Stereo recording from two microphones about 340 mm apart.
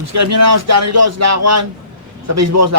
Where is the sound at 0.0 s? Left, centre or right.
Right.